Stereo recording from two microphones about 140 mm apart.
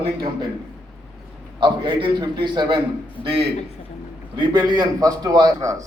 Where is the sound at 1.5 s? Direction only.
35° right (ahead or behind).